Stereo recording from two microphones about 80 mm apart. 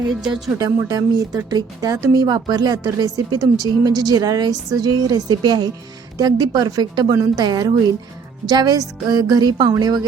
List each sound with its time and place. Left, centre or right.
0.1 s speech: centre
0.6 s speech: right
3.8 s a woman's voice: right
6.1 s a woman's voice: right